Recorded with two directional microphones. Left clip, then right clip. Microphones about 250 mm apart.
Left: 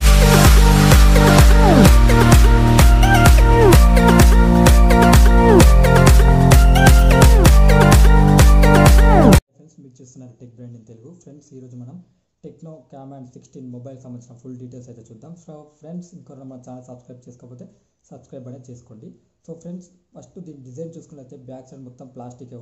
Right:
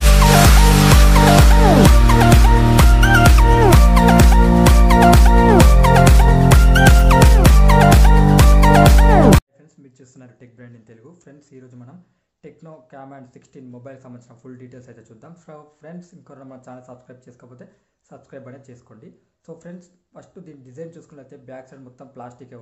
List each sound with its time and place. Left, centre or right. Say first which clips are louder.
0.0 s music: right 1 dB; centre
10.1 s a sound: left 2 dB; centre
12.9 s speech: right 2 dB; centre
14.8 s speech: left 2 dB; centre
18.3 s speech: left 1 dB; centre
20.4 s speech: left 2 dB; centre
21.6 s speech: left 2 dB; centre